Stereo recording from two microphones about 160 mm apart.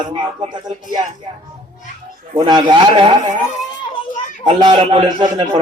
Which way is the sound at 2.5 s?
25° right (ahead or behind).